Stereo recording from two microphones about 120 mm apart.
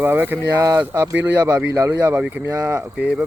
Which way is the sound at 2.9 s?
10° right (ahead or behind).